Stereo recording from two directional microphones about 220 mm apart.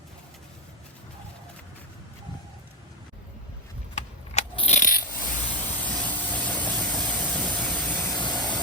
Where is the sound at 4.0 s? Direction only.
30° left (ahead or behind).